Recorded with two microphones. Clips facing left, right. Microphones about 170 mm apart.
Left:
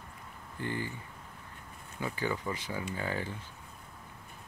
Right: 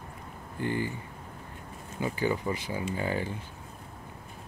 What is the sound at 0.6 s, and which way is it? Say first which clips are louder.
Speech: right 5 dB; 15° right (ahead or behind).